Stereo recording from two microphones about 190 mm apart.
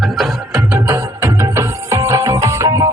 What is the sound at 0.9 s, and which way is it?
Music, 10° right (ahead or behind).